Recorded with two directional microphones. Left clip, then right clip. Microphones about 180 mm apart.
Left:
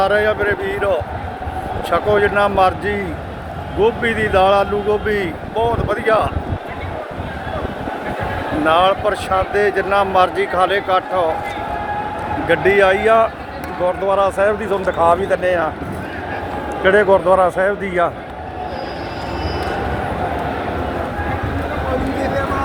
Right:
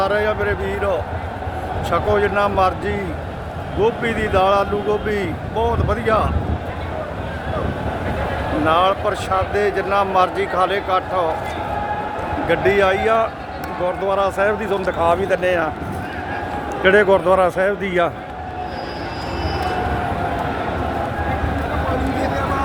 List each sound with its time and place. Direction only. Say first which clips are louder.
0.0 s speech: left 3 dB; 5° left (ahead or behind)
8.6 s speech: left 3 dB; centre (ahead or behind)
12.5 s speech: left 3 dB; centre (ahead or behind)
13.8 s speech: left 3 dB; 10° right (ahead or behind)
15.4 s speech: left 1 dB; 20° right (ahead or behind)
16.8 s speech: left 1 dB; 25° right (ahead or behind)